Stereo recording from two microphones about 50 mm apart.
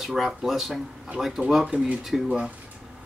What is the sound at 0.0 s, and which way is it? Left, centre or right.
Speech, centre.